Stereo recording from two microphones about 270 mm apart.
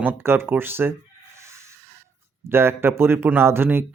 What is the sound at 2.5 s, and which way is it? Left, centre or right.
A man's voice, centre.